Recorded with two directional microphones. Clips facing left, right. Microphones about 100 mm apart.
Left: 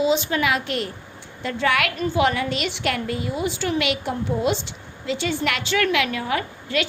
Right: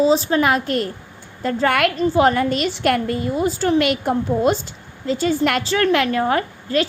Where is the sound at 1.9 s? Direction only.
35° right (ahead or behind).